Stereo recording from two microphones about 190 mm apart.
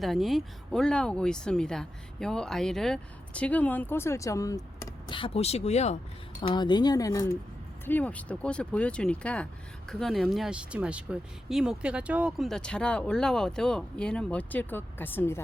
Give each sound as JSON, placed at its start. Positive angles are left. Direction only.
{"t": 0.0, "sound": "speech", "side_deg": 0}
{"t": 6.4, "sound": "speech", "side_deg": 25}